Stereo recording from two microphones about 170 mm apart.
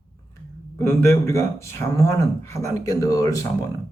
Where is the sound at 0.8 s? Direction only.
15° left (ahead or behind).